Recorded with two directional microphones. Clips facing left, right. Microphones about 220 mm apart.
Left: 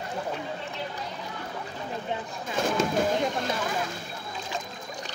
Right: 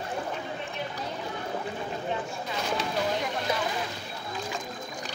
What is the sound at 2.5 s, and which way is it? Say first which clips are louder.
Fireworks: left 6 dB; 50° left (ahead or behind).